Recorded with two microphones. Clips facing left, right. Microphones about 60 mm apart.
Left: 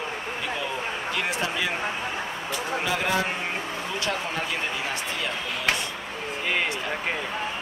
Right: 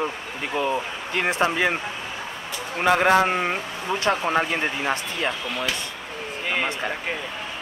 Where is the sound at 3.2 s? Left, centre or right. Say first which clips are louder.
Right 6 dB; right.